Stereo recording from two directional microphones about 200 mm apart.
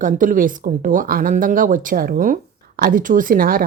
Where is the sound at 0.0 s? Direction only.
40° right (ahead or behind).